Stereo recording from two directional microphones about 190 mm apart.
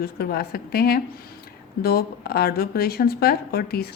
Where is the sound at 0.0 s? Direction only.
50° left (ahead or behind).